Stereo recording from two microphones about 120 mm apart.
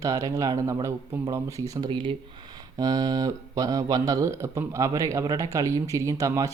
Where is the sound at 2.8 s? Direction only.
30° right (ahead or behind).